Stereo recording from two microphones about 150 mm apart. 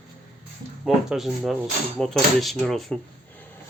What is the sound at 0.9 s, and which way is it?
Speech, centre (ahead or behind).